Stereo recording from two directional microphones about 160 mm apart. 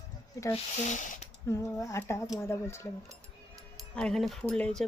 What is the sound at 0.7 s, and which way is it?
Speech, 50° left (ahead or behind).